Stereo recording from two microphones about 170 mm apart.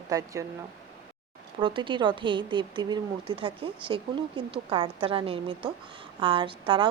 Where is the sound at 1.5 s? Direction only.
30° right (ahead or behind).